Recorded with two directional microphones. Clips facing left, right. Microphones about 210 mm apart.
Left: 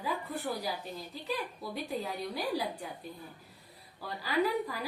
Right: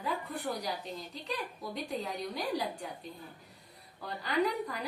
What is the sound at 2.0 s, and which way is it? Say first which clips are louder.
Speech: left 1 dB; 10° left (ahead or behind).